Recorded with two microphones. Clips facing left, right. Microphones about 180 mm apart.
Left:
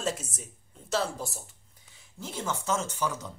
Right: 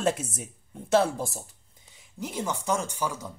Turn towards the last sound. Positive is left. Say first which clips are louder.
# right 1 dB
turn(degrees=-10)  # may be behind; listen again after turning